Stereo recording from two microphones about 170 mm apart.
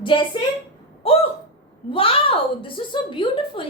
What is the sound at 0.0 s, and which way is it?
Speech, 30° left (ahead or behind).